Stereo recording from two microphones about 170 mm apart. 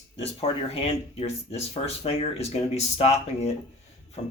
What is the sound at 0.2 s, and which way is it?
Speech, 35° left (ahead or behind).